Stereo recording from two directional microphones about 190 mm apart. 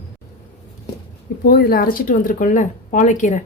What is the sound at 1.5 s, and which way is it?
A woman's voice, 55° left (ahead or behind).